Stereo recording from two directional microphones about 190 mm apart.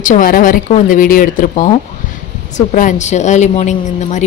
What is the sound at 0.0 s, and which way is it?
A woman's voice, 45° left (ahead or behind).